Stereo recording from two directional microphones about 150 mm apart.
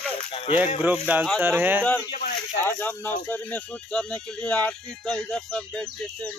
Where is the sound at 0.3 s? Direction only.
40° left (ahead or behind).